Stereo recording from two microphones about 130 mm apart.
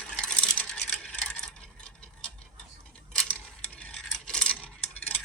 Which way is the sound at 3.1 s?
10° left (ahead or behind).